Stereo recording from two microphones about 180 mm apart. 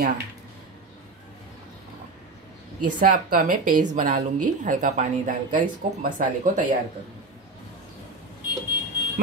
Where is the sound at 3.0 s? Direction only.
50° right (ahead or behind).